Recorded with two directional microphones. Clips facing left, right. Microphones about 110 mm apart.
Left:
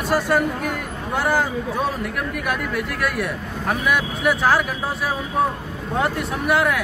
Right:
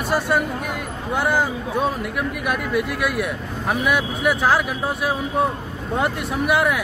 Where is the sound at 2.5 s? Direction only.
5° right (ahead or behind).